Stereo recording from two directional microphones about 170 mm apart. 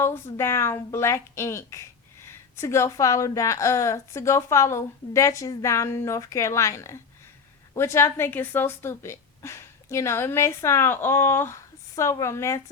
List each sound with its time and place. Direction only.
0.0 s a woman's voice: 15° left (ahead or behind)